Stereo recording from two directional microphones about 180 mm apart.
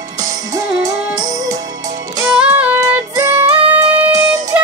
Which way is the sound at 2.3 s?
5° right (ahead or behind).